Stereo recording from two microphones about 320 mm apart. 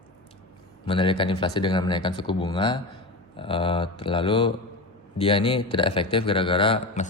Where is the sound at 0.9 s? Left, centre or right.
Centre.